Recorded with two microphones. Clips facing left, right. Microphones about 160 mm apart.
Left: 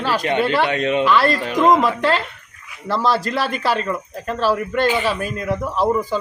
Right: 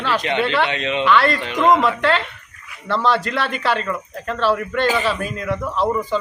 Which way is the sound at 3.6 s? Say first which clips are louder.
Left 1 dB; 5° left (ahead or behind).